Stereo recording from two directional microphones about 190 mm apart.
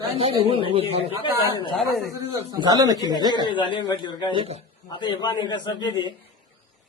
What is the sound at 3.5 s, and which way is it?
Speech, 25° left (ahead or behind).